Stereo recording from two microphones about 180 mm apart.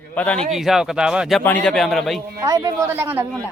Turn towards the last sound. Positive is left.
turn(degrees=-10)  # may be behind; listen again after turning